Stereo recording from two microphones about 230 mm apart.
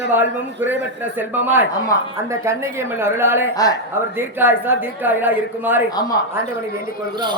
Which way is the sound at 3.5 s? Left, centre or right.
Centre.